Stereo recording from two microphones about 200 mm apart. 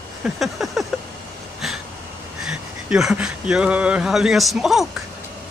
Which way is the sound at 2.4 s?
5° right (ahead or behind).